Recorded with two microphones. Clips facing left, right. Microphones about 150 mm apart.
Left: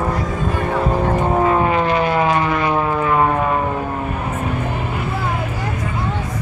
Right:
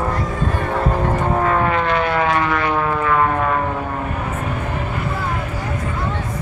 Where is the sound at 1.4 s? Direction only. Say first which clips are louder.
Left 2 dB; 20° left (ahead or behind).